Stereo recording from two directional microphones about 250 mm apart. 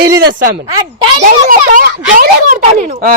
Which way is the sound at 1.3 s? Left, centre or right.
Right.